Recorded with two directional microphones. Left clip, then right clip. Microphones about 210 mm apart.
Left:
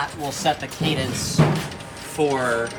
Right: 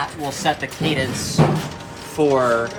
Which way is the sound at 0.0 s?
Centre (ahead or behind).